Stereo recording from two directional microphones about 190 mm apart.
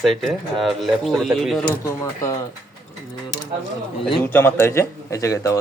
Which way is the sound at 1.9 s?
15° left (ahead or behind).